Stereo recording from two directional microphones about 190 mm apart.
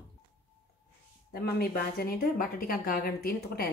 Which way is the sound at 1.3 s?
55° left (ahead or behind).